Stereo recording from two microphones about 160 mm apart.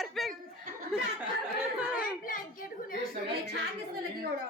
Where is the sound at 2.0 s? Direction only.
60° left (ahead or behind).